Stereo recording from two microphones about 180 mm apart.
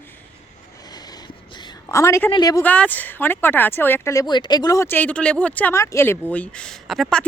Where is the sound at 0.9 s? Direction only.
20° left (ahead or behind).